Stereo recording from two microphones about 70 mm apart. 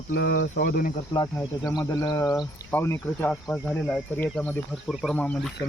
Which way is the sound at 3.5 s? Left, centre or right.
Left.